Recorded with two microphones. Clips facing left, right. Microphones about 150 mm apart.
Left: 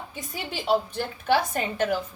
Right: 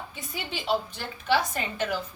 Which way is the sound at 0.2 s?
45° left (ahead or behind).